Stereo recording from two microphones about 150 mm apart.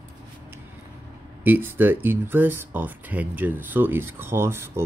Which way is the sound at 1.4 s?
10° right (ahead or behind).